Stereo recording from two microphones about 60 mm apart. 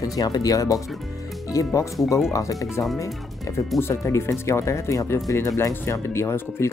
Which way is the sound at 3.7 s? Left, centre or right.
Left.